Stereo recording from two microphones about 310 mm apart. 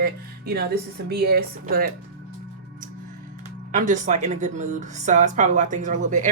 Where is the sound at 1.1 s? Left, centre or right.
Right.